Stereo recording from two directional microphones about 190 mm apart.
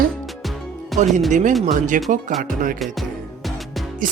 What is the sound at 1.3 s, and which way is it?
Speech, 40° right (ahead or behind).